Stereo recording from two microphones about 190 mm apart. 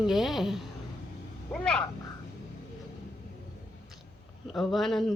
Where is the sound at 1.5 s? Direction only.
5° left (ahead or behind).